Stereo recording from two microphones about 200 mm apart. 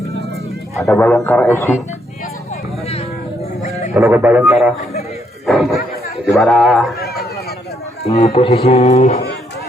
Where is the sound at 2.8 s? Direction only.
30° left (ahead or behind).